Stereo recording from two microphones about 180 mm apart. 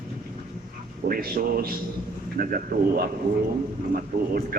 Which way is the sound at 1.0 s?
55° right (ahead or behind).